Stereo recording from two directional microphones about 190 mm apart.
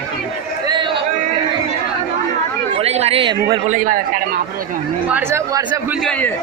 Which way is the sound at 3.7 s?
45° right (ahead or behind).